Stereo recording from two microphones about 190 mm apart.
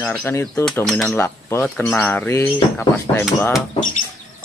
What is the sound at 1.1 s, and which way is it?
Speech, 15° left (ahead or behind).